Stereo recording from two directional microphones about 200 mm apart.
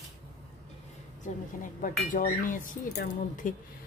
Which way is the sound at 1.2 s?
40° left (ahead or behind).